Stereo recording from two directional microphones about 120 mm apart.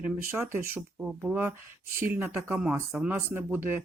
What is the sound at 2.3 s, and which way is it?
Speech, 5° right (ahead or behind).